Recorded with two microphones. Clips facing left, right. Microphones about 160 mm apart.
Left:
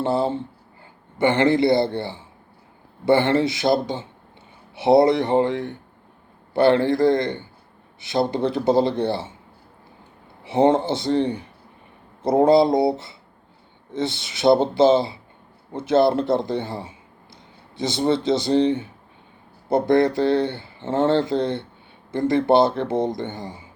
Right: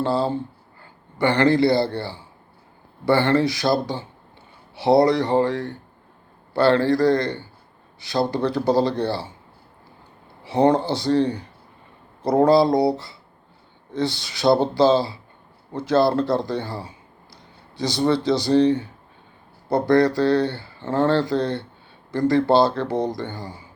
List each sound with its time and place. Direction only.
0.0 s speech: 20° left (ahead or behind)
10.4 s speech: 20° left (ahead or behind)